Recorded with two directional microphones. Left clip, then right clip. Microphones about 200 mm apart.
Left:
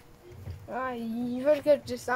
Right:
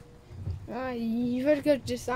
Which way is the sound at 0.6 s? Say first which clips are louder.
Even; 20° right (ahead or behind).